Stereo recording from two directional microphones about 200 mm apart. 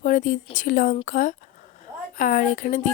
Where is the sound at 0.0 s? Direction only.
40° left (ahead or behind).